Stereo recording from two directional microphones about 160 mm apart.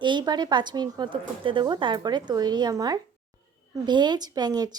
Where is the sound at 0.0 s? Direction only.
30° right (ahead or behind).